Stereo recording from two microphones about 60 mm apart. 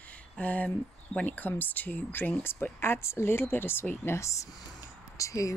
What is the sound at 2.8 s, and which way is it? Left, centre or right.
Speech, left.